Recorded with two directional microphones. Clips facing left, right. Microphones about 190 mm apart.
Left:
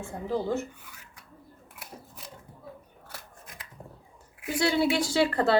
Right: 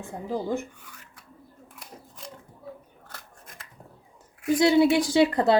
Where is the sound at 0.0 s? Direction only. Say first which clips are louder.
Even; 15° right (ahead or behind).